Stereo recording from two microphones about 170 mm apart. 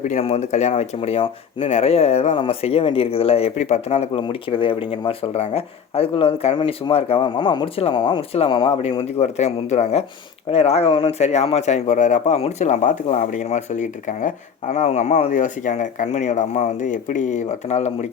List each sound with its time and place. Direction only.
0.0 s a man's voice: 40° left (ahead or behind)